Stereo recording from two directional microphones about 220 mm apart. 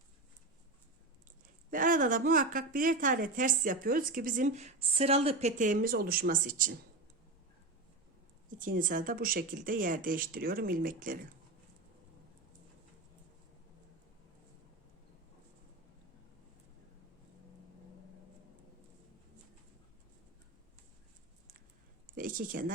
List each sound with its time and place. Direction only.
1.7 s a woman's voice: 35° right (ahead or behind)
8.4 s a woman's voice: 40° right (ahead or behind)
22.1 s a sound: 40° right (ahead or behind)